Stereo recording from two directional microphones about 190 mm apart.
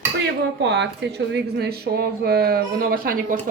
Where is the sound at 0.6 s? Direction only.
70° right (ahead or behind).